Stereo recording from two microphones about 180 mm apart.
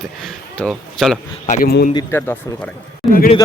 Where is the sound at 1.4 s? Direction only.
50° left (ahead or behind).